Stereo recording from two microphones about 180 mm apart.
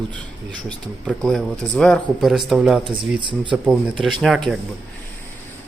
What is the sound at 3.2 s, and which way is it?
Speech, 25° right (ahead or behind).